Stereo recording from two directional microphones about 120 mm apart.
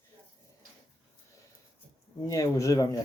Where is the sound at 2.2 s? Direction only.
30° left (ahead or behind).